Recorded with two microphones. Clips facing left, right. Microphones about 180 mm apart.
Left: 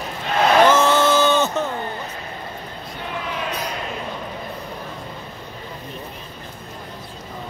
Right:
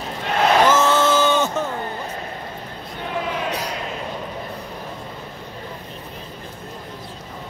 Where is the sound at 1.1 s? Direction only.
10° right (ahead or behind).